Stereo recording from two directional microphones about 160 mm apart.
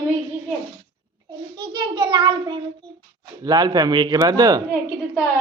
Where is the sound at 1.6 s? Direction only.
25° right (ahead or behind).